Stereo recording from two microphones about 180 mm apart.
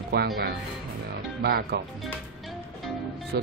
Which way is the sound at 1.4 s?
60° right (ahead or behind).